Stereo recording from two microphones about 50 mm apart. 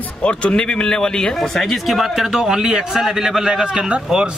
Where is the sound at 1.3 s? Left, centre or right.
Centre.